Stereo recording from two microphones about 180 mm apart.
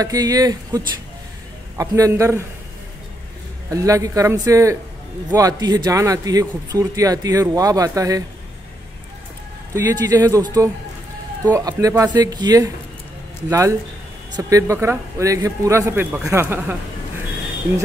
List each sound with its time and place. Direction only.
0.0 s a man's voice: 20° right (ahead or behind)
3.7 s a man's voice: 20° right (ahead or behind)
9.8 s a man's voice: 20° right (ahead or behind)